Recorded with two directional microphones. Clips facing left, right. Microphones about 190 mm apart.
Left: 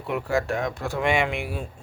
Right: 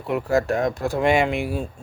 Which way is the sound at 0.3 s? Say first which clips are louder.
Right 5 dB; 40° right (ahead or behind).